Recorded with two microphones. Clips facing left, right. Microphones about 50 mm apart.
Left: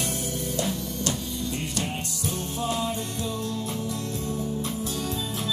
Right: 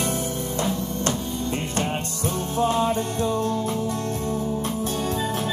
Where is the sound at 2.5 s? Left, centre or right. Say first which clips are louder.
Right 8 dB; right.